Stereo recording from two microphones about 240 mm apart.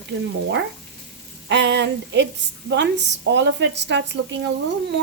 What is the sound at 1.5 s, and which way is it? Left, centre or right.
A woman's voice, right.